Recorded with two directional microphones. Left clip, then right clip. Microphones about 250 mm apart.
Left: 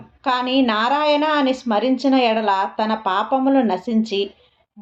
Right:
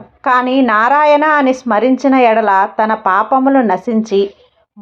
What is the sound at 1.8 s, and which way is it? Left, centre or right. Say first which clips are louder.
Speech: right 7 dB; right.